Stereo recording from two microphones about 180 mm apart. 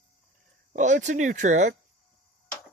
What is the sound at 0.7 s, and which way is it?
Speech, 40° right (ahead or behind).